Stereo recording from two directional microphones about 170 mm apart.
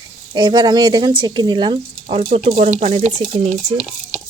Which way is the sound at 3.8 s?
5° right (ahead or behind).